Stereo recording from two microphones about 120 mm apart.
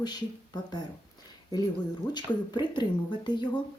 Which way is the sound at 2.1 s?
35° left (ahead or behind).